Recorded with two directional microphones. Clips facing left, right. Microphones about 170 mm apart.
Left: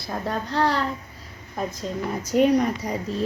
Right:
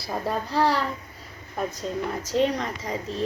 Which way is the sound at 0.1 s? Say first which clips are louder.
Even; 5° right (ahead or behind).